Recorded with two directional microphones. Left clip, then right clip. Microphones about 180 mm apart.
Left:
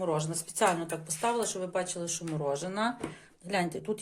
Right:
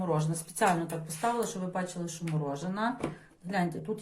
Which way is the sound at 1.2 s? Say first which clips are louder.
Even; 55° left (ahead or behind).